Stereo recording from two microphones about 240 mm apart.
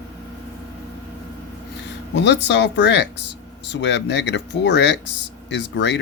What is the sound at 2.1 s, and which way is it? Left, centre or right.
Speech, left.